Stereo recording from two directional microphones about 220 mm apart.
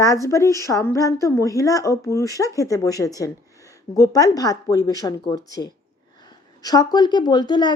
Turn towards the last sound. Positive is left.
turn(degrees=20)  # may be behind; listen again after turning